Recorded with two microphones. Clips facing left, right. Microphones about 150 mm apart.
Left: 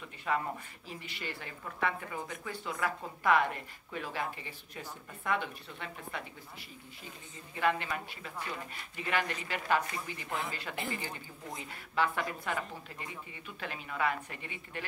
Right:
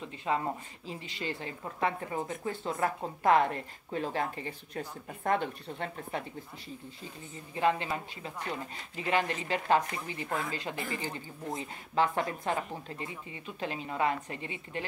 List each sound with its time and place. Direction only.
0.0 s speech: 25° right (ahead or behind)
4.7 s a woman's voice: 40° right (ahead or behind)
7.5 s speech: 25° right (ahead or behind)